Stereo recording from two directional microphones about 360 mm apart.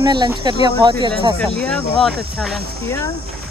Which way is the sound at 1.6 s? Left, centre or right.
Centre.